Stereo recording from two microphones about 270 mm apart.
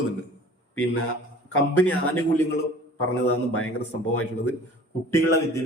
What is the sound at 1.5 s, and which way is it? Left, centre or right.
Speech, left.